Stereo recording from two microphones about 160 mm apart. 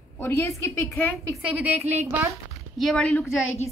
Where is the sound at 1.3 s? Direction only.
10° right (ahead or behind).